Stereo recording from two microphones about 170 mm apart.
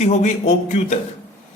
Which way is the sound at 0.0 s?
40° left (ahead or behind).